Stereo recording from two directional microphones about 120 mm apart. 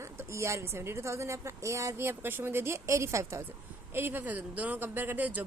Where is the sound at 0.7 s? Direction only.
20° right (ahead or behind).